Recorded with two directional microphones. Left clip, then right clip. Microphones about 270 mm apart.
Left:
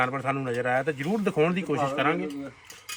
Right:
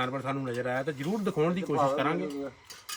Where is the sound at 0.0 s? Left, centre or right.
Centre.